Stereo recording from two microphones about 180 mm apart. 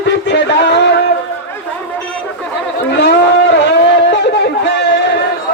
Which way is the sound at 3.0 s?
70° left (ahead or behind).